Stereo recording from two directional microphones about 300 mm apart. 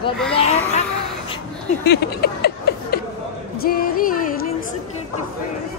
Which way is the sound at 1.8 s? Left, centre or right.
Left.